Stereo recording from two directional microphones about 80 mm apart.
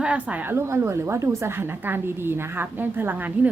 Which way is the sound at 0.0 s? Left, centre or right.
Centre.